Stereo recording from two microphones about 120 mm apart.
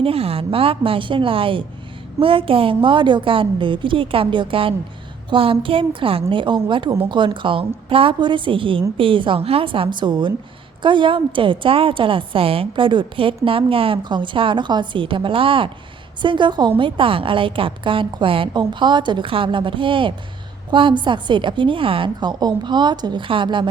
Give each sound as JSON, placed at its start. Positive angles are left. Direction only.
{"t": 0.0, "sound": "a woman's voice", "side_deg": -55}